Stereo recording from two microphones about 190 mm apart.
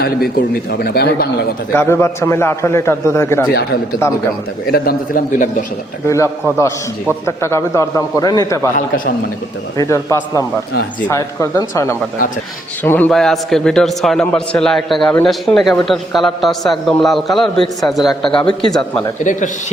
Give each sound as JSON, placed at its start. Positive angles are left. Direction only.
{"t": 0.0, "sound": "a man's voice", "side_deg": 55}
{"t": 1.7, "sound": "a man's voice", "side_deg": 10}
{"t": 3.5, "sound": "a man's voice", "side_deg": 55}
{"t": 6.1, "sound": "a man's voice", "side_deg": 15}
{"t": 9.7, "sound": "a man's voice", "side_deg": 15}
{"t": 19.2, "sound": "speech", "side_deg": 40}